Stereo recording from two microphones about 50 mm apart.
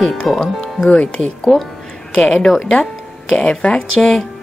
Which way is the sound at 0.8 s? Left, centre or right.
Left.